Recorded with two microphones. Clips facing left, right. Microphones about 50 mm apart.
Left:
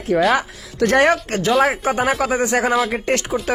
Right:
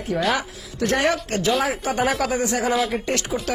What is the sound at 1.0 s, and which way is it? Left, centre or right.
Speech, left.